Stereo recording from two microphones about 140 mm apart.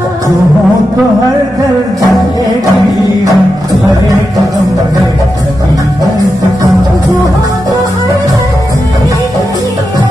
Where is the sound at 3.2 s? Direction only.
25° right (ahead or behind).